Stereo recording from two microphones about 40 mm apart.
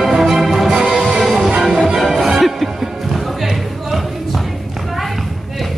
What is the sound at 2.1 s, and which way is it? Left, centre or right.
Music, centre.